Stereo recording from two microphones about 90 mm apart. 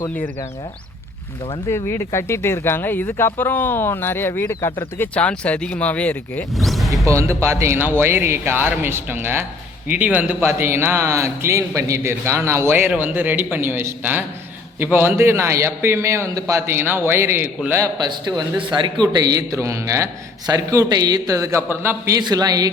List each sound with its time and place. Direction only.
1.7 s speech: 30° left (ahead or behind)
5.1 s speech: 15° left (ahead or behind)
6.6 s music: centre (ahead or behind)
6.9 s a man's voice: 35° right (ahead or behind)
17.9 s a man's voice: 50° right (ahead or behind)
19.0 s a man's voice: 45° right (ahead or behind)
21.7 s speech: 25° right (ahead or behind)
22.2 s a man's voice: 45° right (ahead or behind)